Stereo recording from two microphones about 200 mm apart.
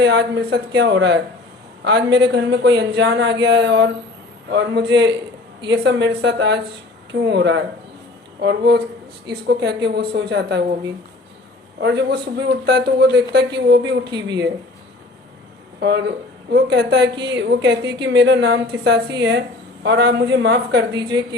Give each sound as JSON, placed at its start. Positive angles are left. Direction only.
{"t": 0.0, "sound": "a woman's voice", "side_deg": -60}
{"t": 11.8, "sound": "a woman's voice", "side_deg": -60}
{"t": 14.1, "sound": "speech", "side_deg": -20}
{"t": 15.8, "sound": "a woman's voice", "side_deg": -60}